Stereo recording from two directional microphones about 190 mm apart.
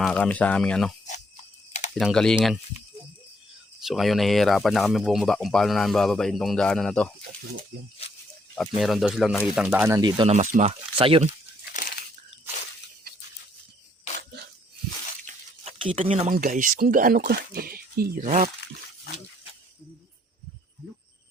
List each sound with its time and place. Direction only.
0.0 s speech: 5° left (ahead or behind)
2.0 s speech: 5° left (ahead or behind)
3.8 s speech: centre (ahead or behind)
8.5 s speech: centre (ahead or behind)
9.9 s speech: 25° right (ahead or behind)
10.3 s speech: 40° right (ahead or behind)
11.7 s crushing: 45° left (ahead or behind)
15.6 s speech: 30° right (ahead or behind)